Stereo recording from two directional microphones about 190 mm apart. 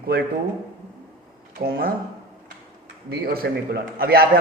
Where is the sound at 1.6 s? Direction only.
50° right (ahead or behind).